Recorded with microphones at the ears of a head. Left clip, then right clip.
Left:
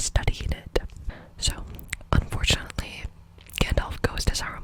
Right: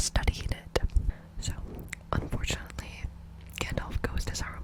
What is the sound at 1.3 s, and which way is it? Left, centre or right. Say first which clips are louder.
Whispering: left 12 dB; left.